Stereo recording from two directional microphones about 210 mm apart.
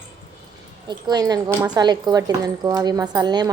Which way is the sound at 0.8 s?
20° right (ahead or behind).